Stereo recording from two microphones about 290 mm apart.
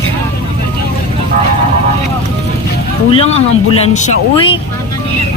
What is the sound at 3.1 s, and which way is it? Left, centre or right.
Speech, centre.